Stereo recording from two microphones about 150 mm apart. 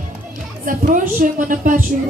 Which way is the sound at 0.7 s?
65° right (ahead or behind).